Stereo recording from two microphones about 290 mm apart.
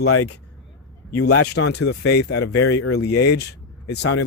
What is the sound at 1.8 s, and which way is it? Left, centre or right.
Speech, left.